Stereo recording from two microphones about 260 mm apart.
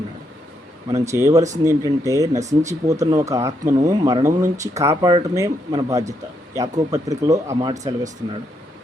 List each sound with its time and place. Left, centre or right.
0.9 s speech: centre
2.3 s speech: right
2.6 s speech: centre